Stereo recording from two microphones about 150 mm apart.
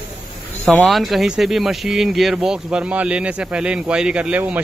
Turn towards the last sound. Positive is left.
turn(degrees=-10)  # may be behind; listen again after turning